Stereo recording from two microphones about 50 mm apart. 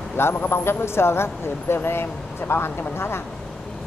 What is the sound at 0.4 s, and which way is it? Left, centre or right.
Speech, left.